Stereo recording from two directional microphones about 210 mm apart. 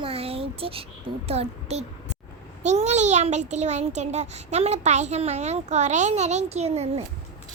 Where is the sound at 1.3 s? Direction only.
30° right (ahead or behind).